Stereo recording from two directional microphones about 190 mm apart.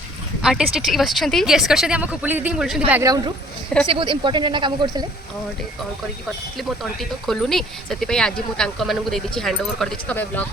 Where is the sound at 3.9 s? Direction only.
25° right (ahead or behind).